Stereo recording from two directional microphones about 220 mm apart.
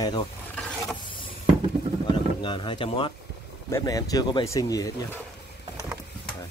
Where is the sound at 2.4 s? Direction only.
20° left (ahead or behind).